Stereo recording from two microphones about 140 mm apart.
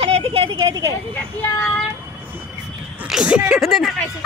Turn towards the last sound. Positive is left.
turn(degrees=0)  # may be behind; listen again after turning